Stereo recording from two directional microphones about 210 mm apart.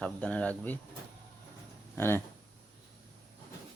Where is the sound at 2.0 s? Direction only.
10° left (ahead or behind).